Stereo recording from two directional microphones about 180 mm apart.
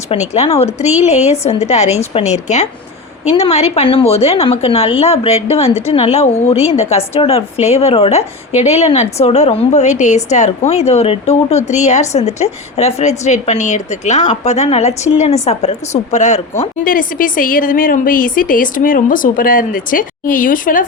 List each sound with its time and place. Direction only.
0.1 s a woman's voice: 35° left (ahead or behind); by 20.8 s 50° left (ahead or behind)